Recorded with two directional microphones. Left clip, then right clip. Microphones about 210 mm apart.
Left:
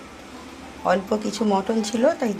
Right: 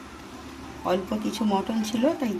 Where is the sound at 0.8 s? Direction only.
15° left (ahead or behind).